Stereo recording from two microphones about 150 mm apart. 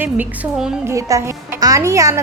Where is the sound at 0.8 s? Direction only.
20° right (ahead or behind).